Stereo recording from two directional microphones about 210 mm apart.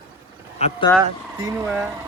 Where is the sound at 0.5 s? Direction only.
30° left (ahead or behind).